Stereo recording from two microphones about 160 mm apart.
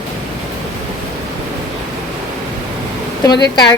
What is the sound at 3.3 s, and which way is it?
Speech, 25° left (ahead or behind).